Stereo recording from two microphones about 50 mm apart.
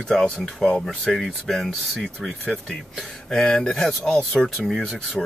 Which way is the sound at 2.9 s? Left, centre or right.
Centre.